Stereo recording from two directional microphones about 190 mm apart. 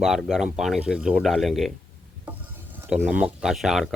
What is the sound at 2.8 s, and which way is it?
Speech, 5° right (ahead or behind).